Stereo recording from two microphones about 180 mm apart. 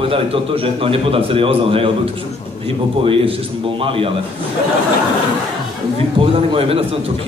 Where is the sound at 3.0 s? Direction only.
30° right (ahead or behind).